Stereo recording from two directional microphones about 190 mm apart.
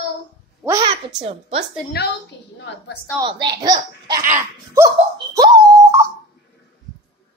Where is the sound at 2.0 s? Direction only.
55° left (ahead or behind).